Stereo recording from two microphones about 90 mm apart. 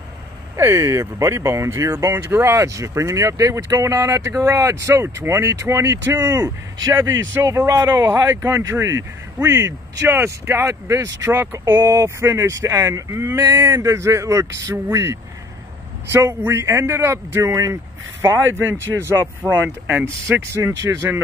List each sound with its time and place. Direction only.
0.6 s speech: 30° right (ahead or behind)